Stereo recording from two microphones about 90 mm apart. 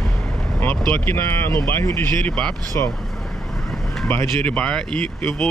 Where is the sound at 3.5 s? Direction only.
5° left (ahead or behind).